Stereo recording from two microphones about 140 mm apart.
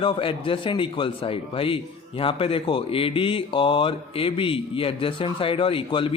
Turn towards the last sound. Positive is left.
turn(degrees=40)  # may be behind; listen again after turning